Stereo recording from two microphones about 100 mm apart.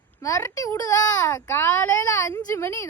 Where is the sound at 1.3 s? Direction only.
25° left (ahead or behind).